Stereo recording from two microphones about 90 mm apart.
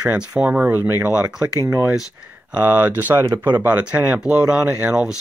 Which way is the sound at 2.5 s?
20° right (ahead or behind).